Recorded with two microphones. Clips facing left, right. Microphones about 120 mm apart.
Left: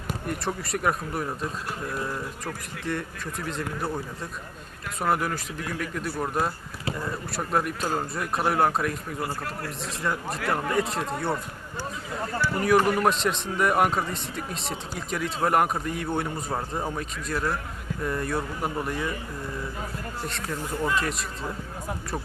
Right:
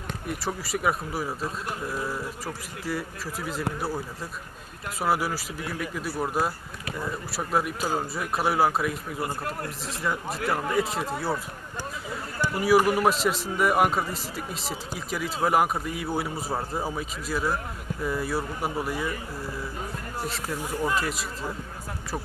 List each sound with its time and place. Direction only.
0.1 s a man's voice: centre (ahead or behind)
9.2 s speech: 25° right (ahead or behind)
9.8 s a man's voice: centre (ahead or behind)
12.5 s a man's voice: 5° right (ahead or behind)
20.2 s a man's voice: 5° right (ahead or behind)